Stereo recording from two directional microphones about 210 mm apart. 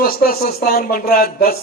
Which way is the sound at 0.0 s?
45° left (ahead or behind).